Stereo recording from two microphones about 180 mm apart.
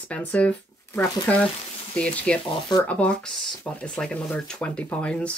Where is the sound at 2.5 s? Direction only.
20° left (ahead or behind).